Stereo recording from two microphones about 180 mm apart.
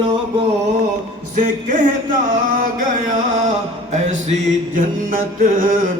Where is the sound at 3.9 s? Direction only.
40° right (ahead or behind).